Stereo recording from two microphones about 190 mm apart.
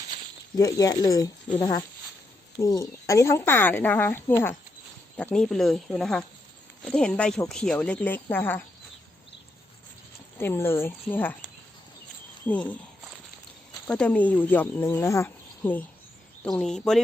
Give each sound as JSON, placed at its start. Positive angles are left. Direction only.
{"t": 0.5, "sound": "speech", "side_deg": 20}
{"t": 2.6, "sound": "speech", "side_deg": 15}
{"t": 10.3, "sound": "speech", "side_deg": 10}
{"t": 12.5, "sound": "speech", "side_deg": 10}
{"t": 13.8, "sound": "speech", "side_deg": 5}